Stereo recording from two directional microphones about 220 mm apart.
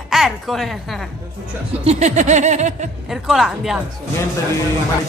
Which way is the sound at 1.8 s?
30° right (ahead or behind).